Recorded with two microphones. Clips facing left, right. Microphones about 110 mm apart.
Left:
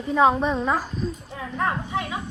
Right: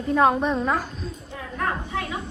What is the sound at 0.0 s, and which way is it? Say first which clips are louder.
A woman's voice: even; centre (ahead or behind).